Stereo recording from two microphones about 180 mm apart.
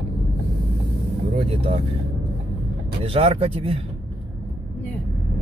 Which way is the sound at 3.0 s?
30° right (ahead or behind).